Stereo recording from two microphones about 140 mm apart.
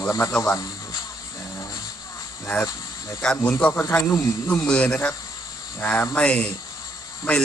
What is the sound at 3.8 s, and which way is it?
Speech, 20° left (ahead or behind).